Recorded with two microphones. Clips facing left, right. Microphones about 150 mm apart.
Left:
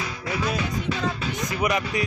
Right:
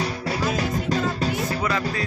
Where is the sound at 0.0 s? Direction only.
35° right (ahead or behind).